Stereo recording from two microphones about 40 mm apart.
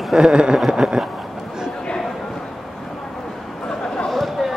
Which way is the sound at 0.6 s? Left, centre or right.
Centre.